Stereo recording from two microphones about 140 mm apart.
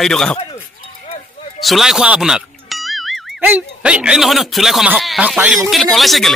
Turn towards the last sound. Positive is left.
turn(degrees=0)  # may be behind; listen again after turning